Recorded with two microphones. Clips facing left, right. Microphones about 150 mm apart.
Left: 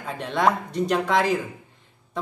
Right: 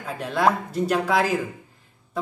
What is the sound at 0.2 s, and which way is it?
Speech, 5° right (ahead or behind).